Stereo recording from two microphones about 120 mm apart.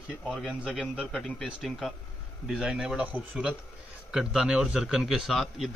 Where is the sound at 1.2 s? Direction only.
5° left (ahead or behind).